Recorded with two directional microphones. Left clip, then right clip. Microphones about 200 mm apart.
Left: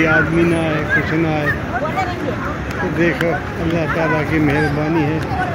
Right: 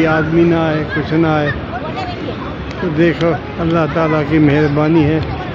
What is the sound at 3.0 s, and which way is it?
Speech, 35° right (ahead or behind).